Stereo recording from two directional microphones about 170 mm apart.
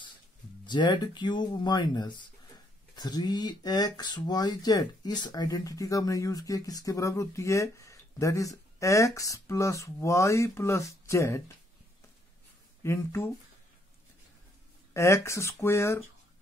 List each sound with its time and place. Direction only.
0.7 s speech: 25° left (ahead or behind)
12.8 s speech: 15° left (ahead or behind)
15.0 s speech: 15° left (ahead or behind)